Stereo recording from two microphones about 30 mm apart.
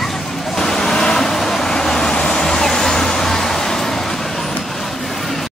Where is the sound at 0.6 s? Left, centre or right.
Centre.